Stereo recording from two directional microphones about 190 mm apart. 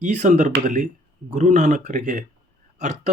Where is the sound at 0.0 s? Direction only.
40° right (ahead or behind).